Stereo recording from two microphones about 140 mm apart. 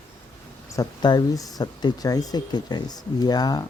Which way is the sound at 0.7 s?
30° left (ahead or behind).